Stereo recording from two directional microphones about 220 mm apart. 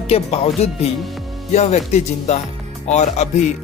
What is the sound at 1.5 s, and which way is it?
Music, 30° left (ahead or behind).